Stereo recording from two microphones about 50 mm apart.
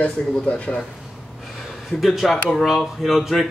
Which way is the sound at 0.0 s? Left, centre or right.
Left.